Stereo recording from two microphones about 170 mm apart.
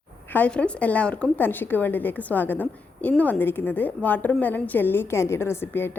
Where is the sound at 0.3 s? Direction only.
10° left (ahead or behind).